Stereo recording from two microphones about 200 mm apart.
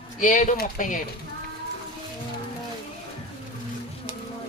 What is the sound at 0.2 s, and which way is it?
Speech, 40° left (ahead or behind).